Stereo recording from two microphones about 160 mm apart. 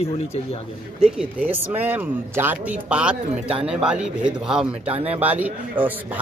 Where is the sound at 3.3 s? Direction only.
35° right (ahead or behind).